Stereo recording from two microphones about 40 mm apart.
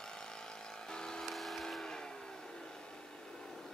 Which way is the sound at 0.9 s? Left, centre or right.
Centre.